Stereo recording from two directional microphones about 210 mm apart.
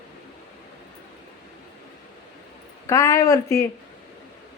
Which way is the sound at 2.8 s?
15° left (ahead or behind).